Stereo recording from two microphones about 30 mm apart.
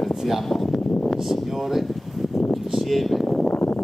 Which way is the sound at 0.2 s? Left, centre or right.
Centre.